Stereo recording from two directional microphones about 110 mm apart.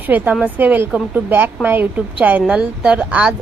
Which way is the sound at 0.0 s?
15° right (ahead or behind).